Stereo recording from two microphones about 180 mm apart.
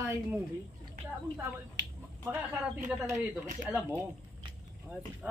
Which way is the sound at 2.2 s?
10° right (ahead or behind).